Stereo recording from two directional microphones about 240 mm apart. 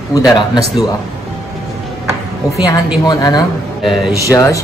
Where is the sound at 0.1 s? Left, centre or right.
Centre.